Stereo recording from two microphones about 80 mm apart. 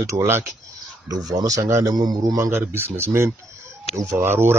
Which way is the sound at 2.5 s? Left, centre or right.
Right.